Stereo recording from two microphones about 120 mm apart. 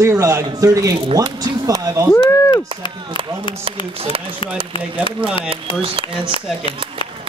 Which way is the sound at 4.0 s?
50° right (ahead or behind).